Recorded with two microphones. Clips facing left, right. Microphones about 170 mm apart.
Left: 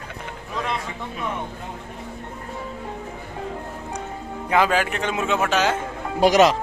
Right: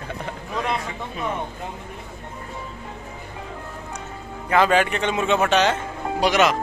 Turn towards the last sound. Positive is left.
turn(degrees=35)  # may be behind; listen again after turning